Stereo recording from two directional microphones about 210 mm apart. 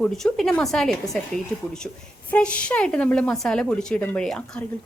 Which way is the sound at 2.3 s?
5° left (ahead or behind).